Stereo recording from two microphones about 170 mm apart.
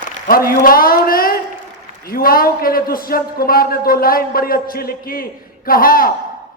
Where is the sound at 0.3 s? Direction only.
60° left (ahead or behind).